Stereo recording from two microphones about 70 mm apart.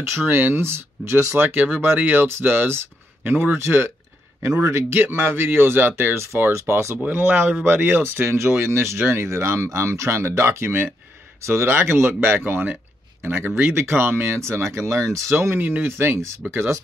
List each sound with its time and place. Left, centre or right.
0.0 s speech: right
3.5 s speech: right
7.0 s speech: right